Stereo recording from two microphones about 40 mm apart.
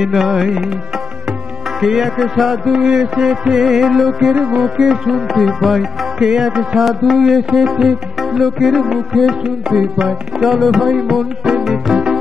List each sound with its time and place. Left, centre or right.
0.0 s music: centre
1.8 s music: centre
2.7 s music: centre
4.4 s music: right
4.6 s music: centre
6.2 s music: centre
6.8 s music: centre
9.4 s music: centre
10.0 s music: centre